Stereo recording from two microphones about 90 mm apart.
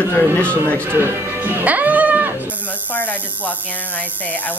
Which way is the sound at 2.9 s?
20° left (ahead or behind).